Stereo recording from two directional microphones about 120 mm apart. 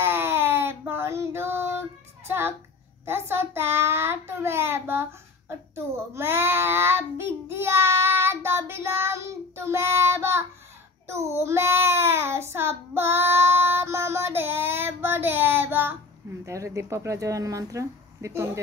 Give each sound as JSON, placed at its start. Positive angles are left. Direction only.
{"t": 0.0, "sound": "child singing", "side_deg": -20}
{"t": 3.1, "sound": "speech", "side_deg": -20}
{"t": 6.1, "sound": "child singing", "side_deg": -20}
{"t": 11.1, "sound": "a child's voice", "side_deg": -25}